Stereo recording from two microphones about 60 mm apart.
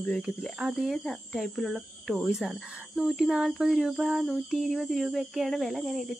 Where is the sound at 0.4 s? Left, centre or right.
Centre.